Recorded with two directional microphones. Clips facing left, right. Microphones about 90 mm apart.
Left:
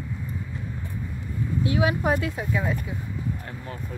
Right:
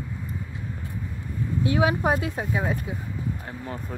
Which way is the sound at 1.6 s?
30° right (ahead or behind).